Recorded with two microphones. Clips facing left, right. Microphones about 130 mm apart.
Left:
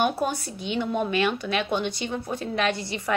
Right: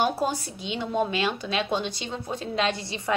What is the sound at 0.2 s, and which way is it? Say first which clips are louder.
A woman's voice: even; 30° right (ahead or behind).